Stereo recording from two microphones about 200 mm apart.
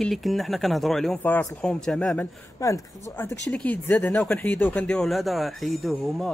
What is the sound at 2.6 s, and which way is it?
A man's voice, 15° left (ahead or behind).